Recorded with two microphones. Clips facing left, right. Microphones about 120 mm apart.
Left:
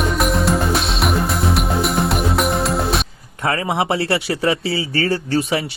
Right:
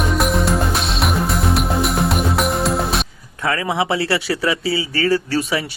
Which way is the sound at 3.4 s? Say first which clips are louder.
Even; 25° left (ahead or behind).